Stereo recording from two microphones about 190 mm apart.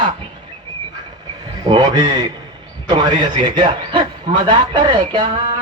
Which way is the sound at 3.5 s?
25° right (ahead or behind).